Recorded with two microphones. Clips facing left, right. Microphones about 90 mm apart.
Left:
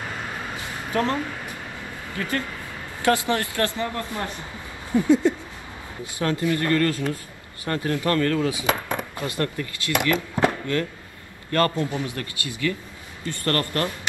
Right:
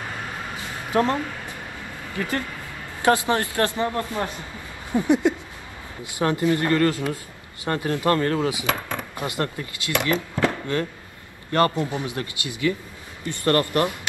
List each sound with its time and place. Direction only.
0.6 s a sound: 20° right (ahead or behind)
2.1 s speech: 25° right (ahead or behind)
8.6 s speech: 20° left (ahead or behind)
9.1 s speech: 20° right (ahead or behind)
10.4 s chop: 20° left (ahead or behind)
11.5 s speech: 20° right (ahead or behind)